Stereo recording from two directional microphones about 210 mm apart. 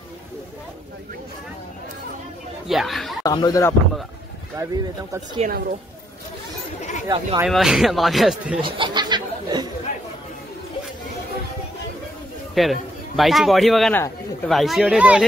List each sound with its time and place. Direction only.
2.7 s speech: centre (ahead or behind)
3.3 s speech: 15° left (ahead or behind)
4.6 s speech: 15° right (ahead or behind)
5.4 s a woman's voice: 40° right (ahead or behind)
7.1 s speech: 20° right (ahead or behind)
7.4 s speech: centre (ahead or behind)
8.5 s a sound: 25° right (ahead or behind)
12.5 s a man's voice: centre (ahead or behind)